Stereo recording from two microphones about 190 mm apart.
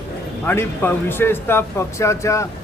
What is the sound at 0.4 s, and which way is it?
A man's voice, 10° left (ahead or behind).